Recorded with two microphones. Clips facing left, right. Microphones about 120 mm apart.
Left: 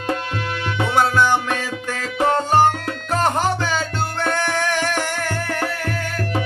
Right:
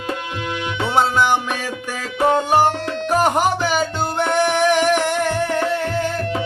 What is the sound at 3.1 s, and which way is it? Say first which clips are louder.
Music: right 2 dB; 15° right (ahead or behind).